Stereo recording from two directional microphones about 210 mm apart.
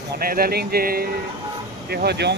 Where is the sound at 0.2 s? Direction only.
45° right (ahead or behind).